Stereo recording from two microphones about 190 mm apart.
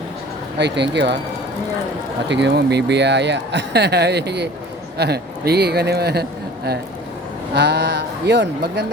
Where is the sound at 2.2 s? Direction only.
65° right (ahead or behind).